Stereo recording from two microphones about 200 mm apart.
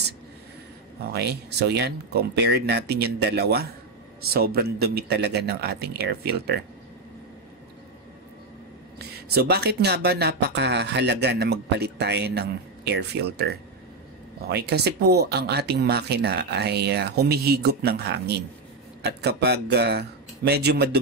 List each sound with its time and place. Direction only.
1.0 s speech: 55° right (ahead or behind)
8.9 s speech: 55° right (ahead or behind)